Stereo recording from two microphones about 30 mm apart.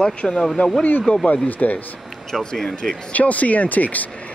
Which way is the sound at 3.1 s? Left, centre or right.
Left.